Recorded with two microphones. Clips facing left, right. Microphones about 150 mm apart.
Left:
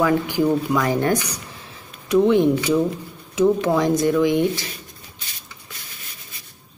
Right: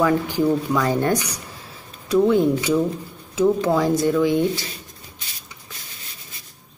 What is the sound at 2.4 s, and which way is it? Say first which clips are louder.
Speech: left 1 dB; centre (ahead or behind).